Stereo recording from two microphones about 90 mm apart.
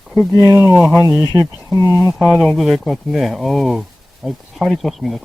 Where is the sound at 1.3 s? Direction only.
45° right (ahead or behind).